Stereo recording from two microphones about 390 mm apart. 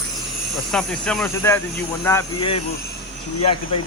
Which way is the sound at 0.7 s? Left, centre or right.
Centre.